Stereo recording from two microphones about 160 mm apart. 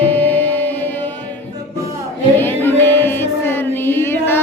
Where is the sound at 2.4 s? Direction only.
15° left (ahead or behind).